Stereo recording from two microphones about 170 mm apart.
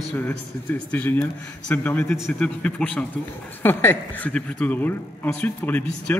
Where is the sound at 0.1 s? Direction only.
10° left (ahead or behind).